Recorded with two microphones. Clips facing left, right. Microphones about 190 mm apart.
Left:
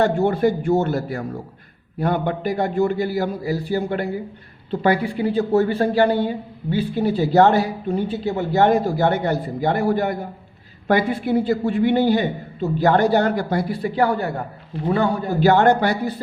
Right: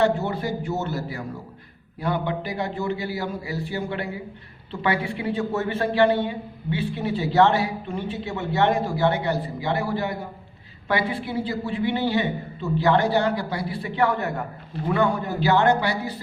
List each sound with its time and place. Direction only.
0.0 s a man's voice: 50° left (ahead or behind); by 15.3 s 35° left (ahead or behind)
15.4 s a man's voice: 50° left (ahead or behind)